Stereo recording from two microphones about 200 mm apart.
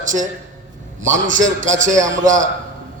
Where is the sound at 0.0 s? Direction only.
40° right (ahead or behind).